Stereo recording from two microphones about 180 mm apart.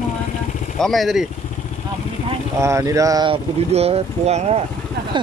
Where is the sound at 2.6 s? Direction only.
15° right (ahead or behind); by 4.6 s 35° right (ahead or behind).